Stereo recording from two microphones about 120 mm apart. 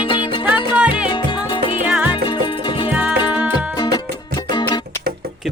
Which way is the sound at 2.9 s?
10° right (ahead or behind).